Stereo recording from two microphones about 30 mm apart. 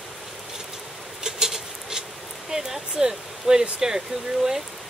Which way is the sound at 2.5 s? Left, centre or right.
Centre.